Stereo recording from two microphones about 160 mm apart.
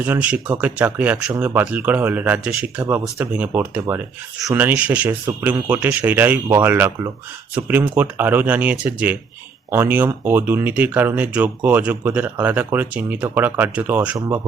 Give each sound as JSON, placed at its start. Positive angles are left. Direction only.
{"t": 0.0, "sound": "speech", "side_deg": -10}
{"t": 14.2, "sound": "speech", "side_deg": -25}